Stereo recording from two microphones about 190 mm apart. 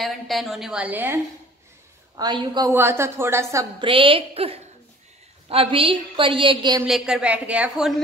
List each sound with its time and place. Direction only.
0.0 s a woman's voice: centre (ahead or behind)
2.1 s a woman's voice: 20° right (ahead or behind)
3.8 s a woman's voice: 25° right (ahead or behind)
6.9 s a woman's voice: 5° right (ahead or behind)